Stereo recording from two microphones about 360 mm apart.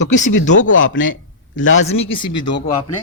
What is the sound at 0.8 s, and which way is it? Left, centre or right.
Speech, left.